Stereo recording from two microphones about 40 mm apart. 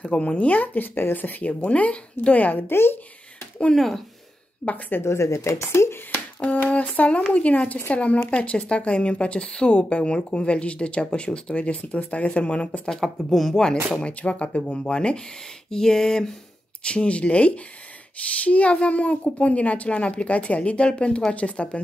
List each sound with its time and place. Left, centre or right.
0.0 s speech: left
0.5 s speech: left
1.6 s speech: left
2.7 s speech: left
3.7 s a sound: centre
4.6 s speech: left
4.9 s speech: left
6.1 s finger snapping: left
7.0 s speech: left
13.0 s speech: centre
14.0 s speech: left
15.7 s a sound: centre
16.8 s speech: left